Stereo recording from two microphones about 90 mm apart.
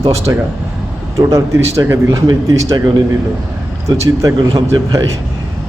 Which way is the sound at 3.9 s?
55° right (ahead or behind).